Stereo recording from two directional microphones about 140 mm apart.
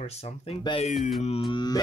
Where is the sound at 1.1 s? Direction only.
45° left (ahead or behind).